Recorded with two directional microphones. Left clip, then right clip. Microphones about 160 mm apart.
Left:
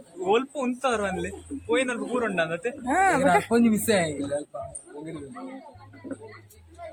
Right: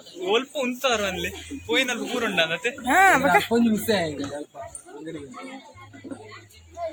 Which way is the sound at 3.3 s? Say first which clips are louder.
Right 2 dB; 15° left (ahead or behind).